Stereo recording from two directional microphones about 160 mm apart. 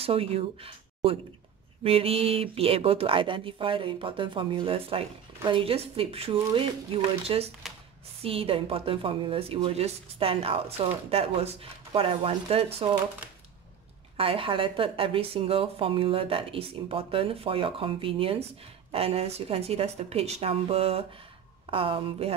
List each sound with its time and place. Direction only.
0.0 s speech: 40° right (ahead or behind)
7.6 s a sound: centre (ahead or behind)
8.2 s speech: 35° right (ahead or behind)
14.1 s speech: 35° right (ahead or behind)